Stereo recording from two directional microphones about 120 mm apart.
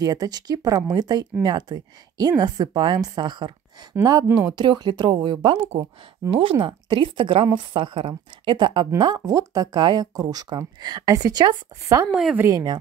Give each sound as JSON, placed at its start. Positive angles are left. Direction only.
{"t": 0.0, "sound": "a woman's voice", "side_deg": -30}
{"t": 12.1, "sound": "speech", "side_deg": -10}
{"t": 12.4, "sound": "speech", "side_deg": -30}